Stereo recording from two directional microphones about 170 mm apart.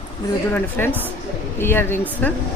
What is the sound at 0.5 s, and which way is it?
Speech, 10° left (ahead or behind).